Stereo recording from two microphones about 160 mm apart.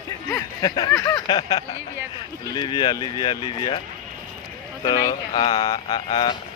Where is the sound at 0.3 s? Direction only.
20° left (ahead or behind).